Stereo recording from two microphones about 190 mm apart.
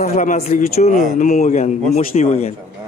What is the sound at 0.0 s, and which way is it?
A man's voice, 40° left (ahead or behind).